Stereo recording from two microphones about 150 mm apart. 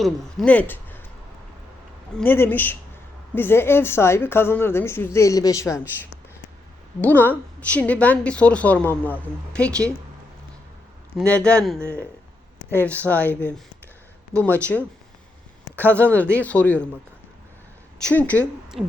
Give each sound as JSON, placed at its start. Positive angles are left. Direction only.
{"t": 0.0, "sound": "speech", "side_deg": 5}
{"t": 2.1, "sound": "a woman's voice", "side_deg": 15}
{"t": 7.0, "sound": "a woman's voice", "side_deg": 10}
{"t": 11.3, "sound": "a woman's voice", "side_deg": 5}
{"t": 14.6, "sound": "a woman's voice", "side_deg": 10}
{"t": 15.7, "sound": "speech", "side_deg": -15}
{"t": 16.0, "sound": "a woman's voice", "side_deg": 10}
{"t": 18.0, "sound": "a woman's voice", "side_deg": 10}
{"t": 18.8, "sound": "owl", "side_deg": 0}